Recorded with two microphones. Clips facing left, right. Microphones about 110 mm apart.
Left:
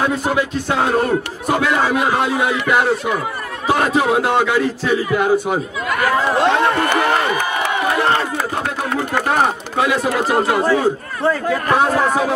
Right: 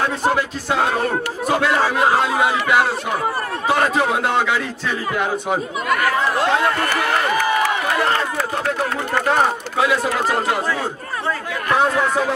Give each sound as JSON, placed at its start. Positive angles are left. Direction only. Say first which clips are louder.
{"t": 0.0, "sound": "a man's voice", "louder": "left 1 dB", "side_deg": 0}
{"t": 2.2, "sound": "a man's voice", "louder": "even", "side_deg": 0}
{"t": 6.2, "sound": "a sound", "louder": "left 3 dB", "side_deg": 20}
{"t": 9.1, "sound": "speech", "louder": "even", "side_deg": 5}
{"t": 11.7, "sound": "speech", "louder": "left 1 dB", "side_deg": 40}